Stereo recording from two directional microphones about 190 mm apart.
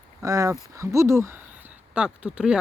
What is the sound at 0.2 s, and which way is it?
Speech, 15° right (ahead or behind).